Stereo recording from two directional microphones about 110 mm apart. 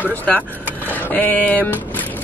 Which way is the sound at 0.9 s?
15° left (ahead or behind).